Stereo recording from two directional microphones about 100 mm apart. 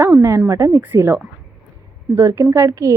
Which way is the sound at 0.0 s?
25° right (ahead or behind).